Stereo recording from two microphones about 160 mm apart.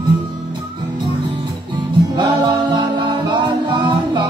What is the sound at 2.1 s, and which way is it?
Music, 30° right (ahead or behind).